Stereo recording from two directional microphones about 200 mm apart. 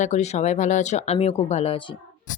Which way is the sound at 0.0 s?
35° left (ahead or behind).